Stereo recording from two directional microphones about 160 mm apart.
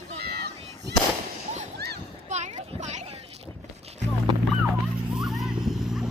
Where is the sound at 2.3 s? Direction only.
45° right (ahead or behind).